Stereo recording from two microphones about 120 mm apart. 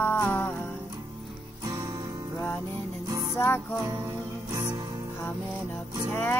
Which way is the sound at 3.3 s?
20° left (ahead or behind).